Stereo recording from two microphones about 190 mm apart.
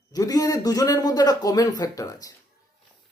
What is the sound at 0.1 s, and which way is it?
A man's voice, 20° left (ahead or behind).